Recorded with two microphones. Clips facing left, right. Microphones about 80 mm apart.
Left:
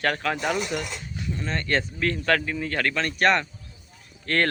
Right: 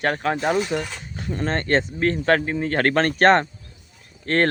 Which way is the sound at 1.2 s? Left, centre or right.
Right.